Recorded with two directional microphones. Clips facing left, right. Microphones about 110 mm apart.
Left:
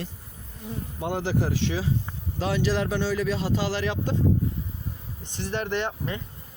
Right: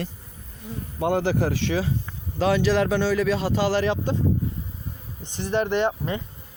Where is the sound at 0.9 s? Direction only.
65° right (ahead or behind).